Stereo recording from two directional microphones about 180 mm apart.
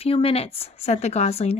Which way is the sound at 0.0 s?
30° left (ahead or behind).